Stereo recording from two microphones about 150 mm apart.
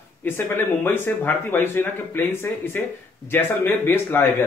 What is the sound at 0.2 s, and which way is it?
Speech, 15° left (ahead or behind).